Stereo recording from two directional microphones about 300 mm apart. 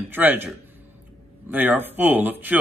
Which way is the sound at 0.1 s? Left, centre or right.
Centre.